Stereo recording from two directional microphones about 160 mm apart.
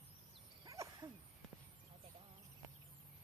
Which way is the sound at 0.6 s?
20° right (ahead or behind).